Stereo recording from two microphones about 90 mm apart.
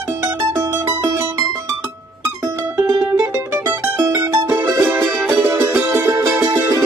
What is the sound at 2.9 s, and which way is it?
Music, 40° right (ahead or behind).